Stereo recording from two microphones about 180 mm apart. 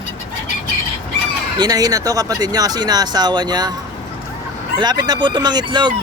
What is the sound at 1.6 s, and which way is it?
Speech, 20° right (ahead or behind).